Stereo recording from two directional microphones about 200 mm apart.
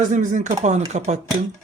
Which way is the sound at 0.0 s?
40° right (ahead or behind).